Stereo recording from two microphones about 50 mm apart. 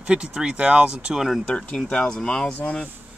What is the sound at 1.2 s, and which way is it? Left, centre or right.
Speech, centre.